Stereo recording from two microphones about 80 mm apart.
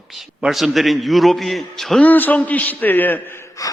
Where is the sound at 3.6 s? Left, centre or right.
Left.